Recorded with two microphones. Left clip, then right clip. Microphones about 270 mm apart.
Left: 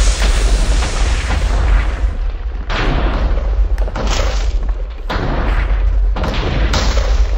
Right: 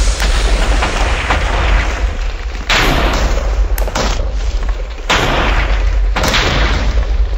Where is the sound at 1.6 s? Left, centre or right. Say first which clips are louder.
Right 7 dB; right.